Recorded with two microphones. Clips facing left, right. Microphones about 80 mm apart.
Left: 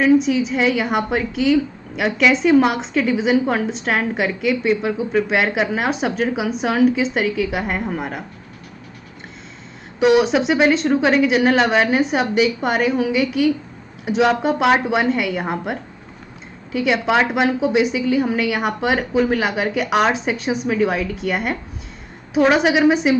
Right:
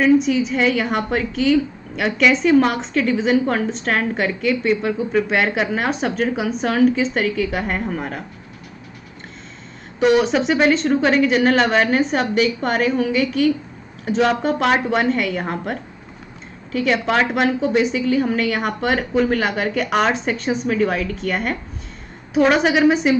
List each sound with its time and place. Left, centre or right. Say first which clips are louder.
0.0 s a woman's voice: even; centre
9.9 s a woman's voice: left 1 dB; centre